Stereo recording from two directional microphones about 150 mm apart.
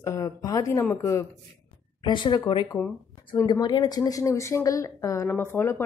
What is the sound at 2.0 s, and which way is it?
A woman's voice, 30° left (ahead or behind).